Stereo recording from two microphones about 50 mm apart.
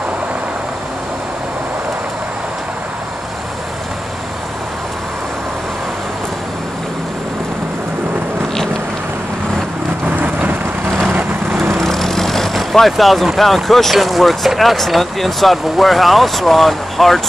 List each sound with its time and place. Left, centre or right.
10.0 s vehicle: right
11.8 s vehicle: centre
13.4 s speech: centre